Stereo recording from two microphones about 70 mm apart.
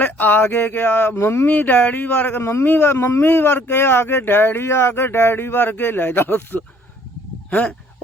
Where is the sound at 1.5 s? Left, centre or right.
Left.